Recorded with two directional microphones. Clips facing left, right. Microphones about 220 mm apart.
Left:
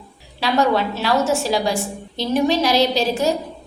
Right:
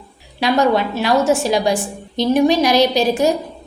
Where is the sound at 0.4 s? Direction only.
15° right (ahead or behind).